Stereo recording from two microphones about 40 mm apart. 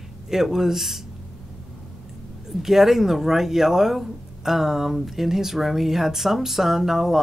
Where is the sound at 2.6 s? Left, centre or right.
Centre.